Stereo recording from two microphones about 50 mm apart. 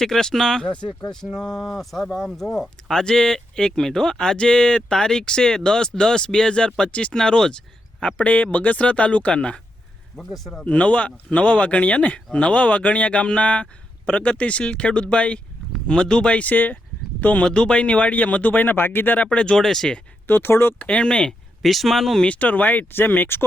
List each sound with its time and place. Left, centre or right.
0.0 s speech: centre
1.3 s speech: centre
3.0 s speech: centre
8.0 s speech: left
10.2 s speech: centre
10.7 s speech: left
17.4 s speech: centre; by 19.2 s left
19.2 s speech: centre
20.2 s speech: left
20.7 s speech: left
21.6 s speech: centre
22.2 s speech: left